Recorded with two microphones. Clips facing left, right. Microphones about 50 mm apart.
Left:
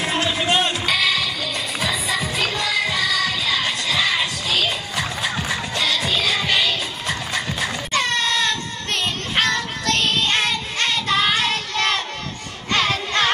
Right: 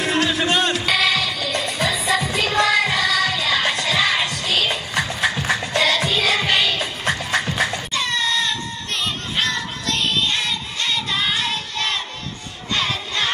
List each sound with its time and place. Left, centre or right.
0.0 s music: left
0.8 s music: centre
7.9 s baby cry: left
9.3 s child singing: left
12.7 s music: left